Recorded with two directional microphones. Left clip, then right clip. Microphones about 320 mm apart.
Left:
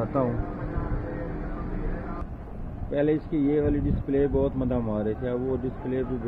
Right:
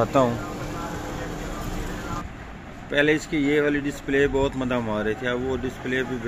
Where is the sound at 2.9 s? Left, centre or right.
Centre.